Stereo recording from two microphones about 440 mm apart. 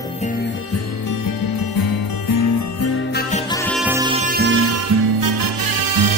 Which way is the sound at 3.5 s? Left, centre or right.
Centre.